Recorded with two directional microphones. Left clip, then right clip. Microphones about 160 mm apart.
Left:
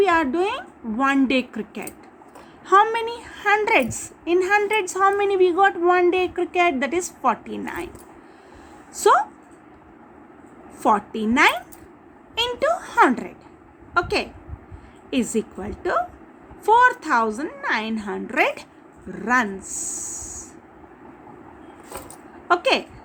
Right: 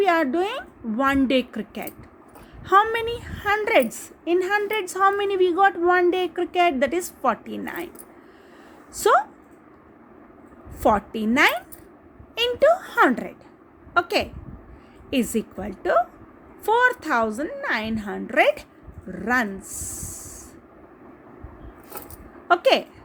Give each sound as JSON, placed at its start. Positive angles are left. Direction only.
{"t": 0.0, "sound": "a woman's voice", "side_deg": -25}
{"t": 9.0, "sound": "a woman's voice", "side_deg": -20}
{"t": 10.8, "sound": "a woman's voice", "side_deg": -20}
{"t": 22.4, "sound": "a woman's voice", "side_deg": -20}